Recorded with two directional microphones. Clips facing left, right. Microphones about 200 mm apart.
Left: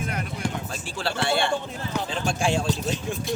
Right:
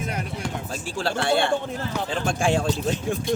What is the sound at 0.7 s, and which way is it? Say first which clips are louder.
Speech: right 3 dB; 45° right (ahead or behind).